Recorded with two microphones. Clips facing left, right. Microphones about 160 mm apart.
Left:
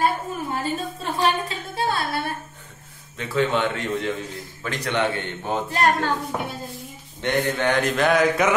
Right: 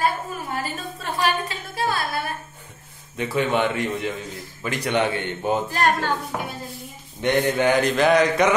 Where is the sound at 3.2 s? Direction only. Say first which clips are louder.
Right 1 dB; 15° right (ahead or behind).